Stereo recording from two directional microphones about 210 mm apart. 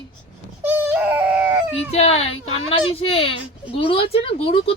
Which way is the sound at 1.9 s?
30° left (ahead or behind).